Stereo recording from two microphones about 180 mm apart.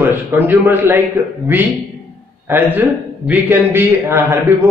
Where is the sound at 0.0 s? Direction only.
10° right (ahead or behind).